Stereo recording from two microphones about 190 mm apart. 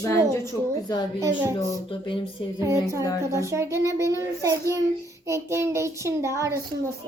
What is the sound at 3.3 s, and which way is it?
A child's voice, 15° right (ahead or behind).